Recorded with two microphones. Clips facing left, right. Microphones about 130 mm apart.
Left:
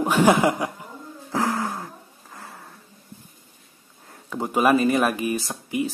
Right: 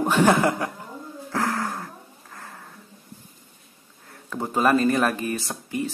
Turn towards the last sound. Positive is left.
turn(degrees=10)  # may be behind; listen again after turning